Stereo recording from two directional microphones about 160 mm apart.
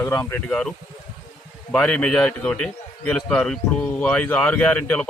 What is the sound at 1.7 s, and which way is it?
A man's voice, 5° left (ahead or behind).